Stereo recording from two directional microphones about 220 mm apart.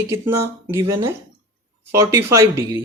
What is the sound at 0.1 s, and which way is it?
Speech, 10° right (ahead or behind).